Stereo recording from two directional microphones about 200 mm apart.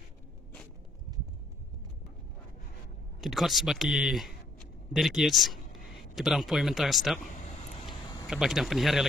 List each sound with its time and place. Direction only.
3.2 s speech: centre (ahead or behind)
7.2 s vehicle: 40° left (ahead or behind)
8.3 s speech: centre (ahead or behind)